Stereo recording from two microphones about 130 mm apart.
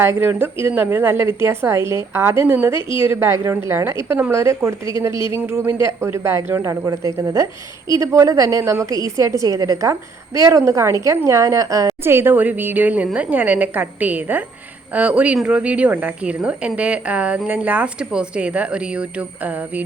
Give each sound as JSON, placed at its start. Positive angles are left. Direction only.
{"t": 0.0, "sound": "a woman's voice", "side_deg": -20}